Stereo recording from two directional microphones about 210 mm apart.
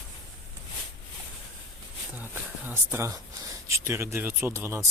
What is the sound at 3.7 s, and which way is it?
Speech, 10° right (ahead or behind).